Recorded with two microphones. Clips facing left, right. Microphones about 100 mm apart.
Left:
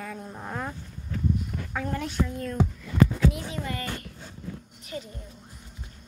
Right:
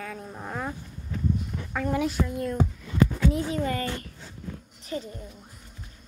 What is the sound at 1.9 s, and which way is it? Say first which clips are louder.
Speech: right 4 dB; 5° right (ahead or behind).